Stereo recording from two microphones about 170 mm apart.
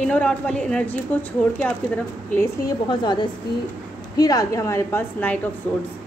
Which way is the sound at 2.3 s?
25° left (ahead or behind).